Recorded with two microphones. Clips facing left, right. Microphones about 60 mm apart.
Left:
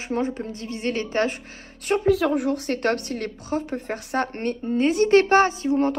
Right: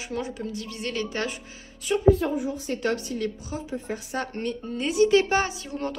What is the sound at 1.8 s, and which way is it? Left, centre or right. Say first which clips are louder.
Speech: even; left.